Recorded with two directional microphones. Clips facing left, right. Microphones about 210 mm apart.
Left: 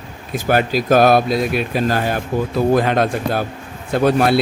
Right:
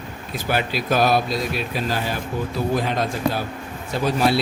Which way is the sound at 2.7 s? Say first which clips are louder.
Left 7 dB; 60° left (ahead or behind).